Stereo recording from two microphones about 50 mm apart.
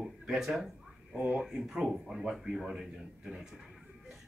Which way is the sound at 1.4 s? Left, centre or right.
Centre.